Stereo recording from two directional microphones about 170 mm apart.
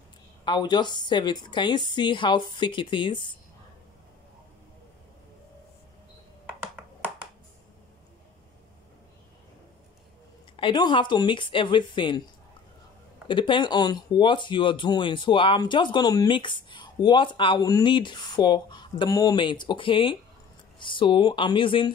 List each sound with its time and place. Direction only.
0.5 s speech: 25° left (ahead or behind)
10.5 s speech: 30° left (ahead or behind)
13.3 s speech: 30° left (ahead or behind)